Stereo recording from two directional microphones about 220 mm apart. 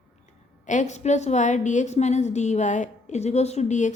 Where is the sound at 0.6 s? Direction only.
35° left (ahead or behind).